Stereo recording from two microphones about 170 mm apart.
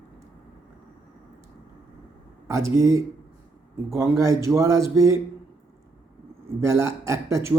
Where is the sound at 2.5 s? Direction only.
15° right (ahead or behind).